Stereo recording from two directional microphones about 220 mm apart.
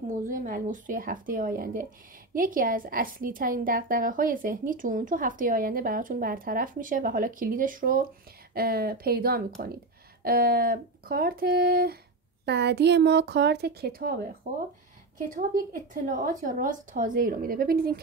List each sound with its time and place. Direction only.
0.2 s a woman's voice: 40° right (ahead or behind)
15.3 s a woman's voice: 35° right (ahead or behind)